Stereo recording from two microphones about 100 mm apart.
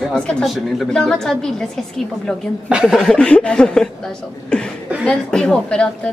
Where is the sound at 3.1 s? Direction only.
10° left (ahead or behind).